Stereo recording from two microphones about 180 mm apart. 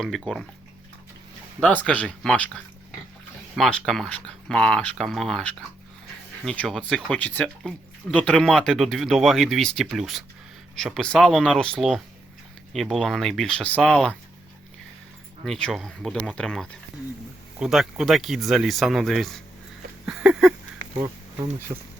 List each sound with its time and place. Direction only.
0.0 s speech: centre (ahead or behind)
1.6 s speech: 10° left (ahead or behind)
15.4 s speech: 5° left (ahead or behind)
20.1 s a sound: 5° right (ahead or behind)
21.7 s speech: 25° right (ahead or behind)